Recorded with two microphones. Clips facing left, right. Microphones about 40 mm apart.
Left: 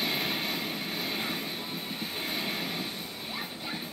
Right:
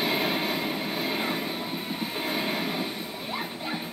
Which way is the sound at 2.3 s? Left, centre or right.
Centre.